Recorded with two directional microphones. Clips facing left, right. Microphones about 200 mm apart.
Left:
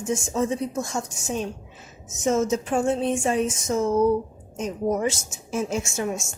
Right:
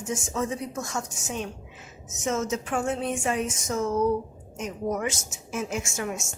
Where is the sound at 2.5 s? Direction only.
30° left (ahead or behind).